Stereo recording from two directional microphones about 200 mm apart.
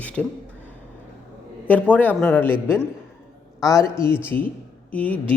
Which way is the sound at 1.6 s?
10° left (ahead or behind).